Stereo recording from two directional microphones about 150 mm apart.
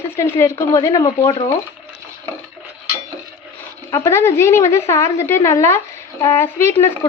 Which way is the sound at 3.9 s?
15° left (ahead or behind).